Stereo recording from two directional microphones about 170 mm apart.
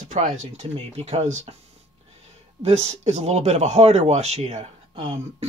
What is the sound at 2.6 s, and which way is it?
A man's voice, 40° right (ahead or behind).